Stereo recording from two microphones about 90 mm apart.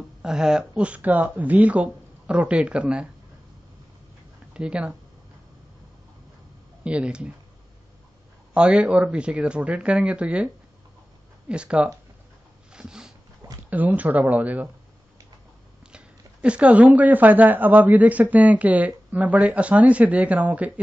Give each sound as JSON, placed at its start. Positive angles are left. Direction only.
{"t": 0.2, "sound": "speech", "side_deg": -10}
{"t": 4.6, "sound": "speech", "side_deg": -10}
{"t": 6.8, "sound": "speech", "side_deg": -10}
{"t": 8.5, "sound": "speech", "side_deg": -10}
{"t": 12.7, "sound": "dog", "side_deg": -10}
{"t": 13.7, "sound": "speech", "side_deg": -20}
{"t": 15.9, "sound": "speech", "side_deg": -10}